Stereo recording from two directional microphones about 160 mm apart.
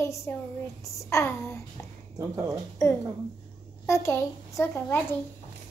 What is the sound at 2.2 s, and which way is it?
Speech, 20° right (ahead or behind).